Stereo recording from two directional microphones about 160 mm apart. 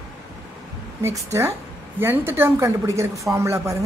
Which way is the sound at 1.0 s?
15° right (ahead or behind).